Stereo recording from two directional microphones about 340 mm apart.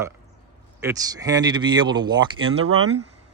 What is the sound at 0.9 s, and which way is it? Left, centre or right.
Speech, centre.